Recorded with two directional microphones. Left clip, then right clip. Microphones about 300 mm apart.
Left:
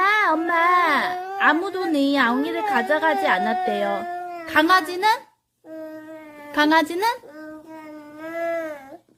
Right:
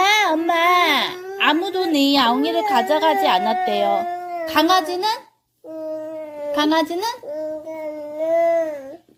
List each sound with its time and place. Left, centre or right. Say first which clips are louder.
0.0 s a woman's voice: right 2 dB; centre
6.5 s a woman's voice: left 1 dB; centre